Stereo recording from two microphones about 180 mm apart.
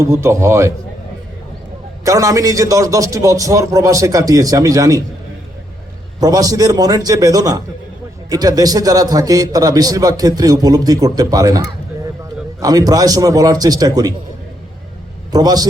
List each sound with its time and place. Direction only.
0.0 s speech: 15° right (ahead or behind)
2.0 s a man's voice: 20° right (ahead or behind)
6.1 s a man's voice: 20° right (ahead or behind)
15.3 s a man's voice: 20° right (ahead or behind)